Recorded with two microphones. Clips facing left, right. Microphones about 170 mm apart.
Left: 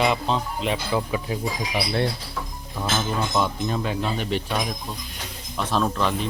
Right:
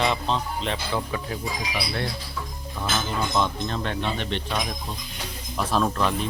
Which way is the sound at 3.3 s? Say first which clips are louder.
Left 1 dB; 5° left (ahead or behind).